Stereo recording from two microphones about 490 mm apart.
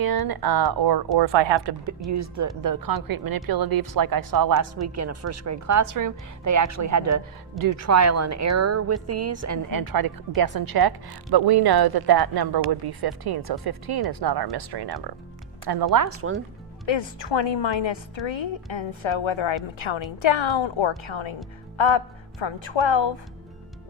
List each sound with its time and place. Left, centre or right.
0.0 s a woman's voice: right
1.2 s a woman's voice: right
2.0 s a woman's voice: right
16.0 s speech: right
16.8 s a woman's voice: left